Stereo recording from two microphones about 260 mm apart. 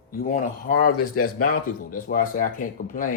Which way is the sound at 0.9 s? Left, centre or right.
Left.